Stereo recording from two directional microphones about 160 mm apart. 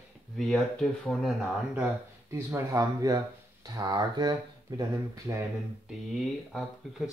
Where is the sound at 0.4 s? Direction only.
Centre (ahead or behind).